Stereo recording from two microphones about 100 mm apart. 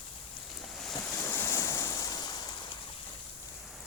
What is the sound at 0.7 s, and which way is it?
Boat, 5° left (ahead or behind).